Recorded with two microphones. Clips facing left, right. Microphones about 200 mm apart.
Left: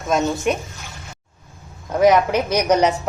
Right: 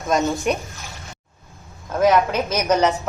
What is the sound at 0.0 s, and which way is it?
Speech, centre (ahead or behind).